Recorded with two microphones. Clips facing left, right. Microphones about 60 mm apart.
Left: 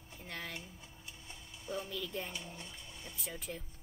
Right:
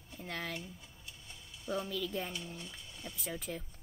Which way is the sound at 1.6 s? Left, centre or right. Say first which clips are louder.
Right 4 dB; right.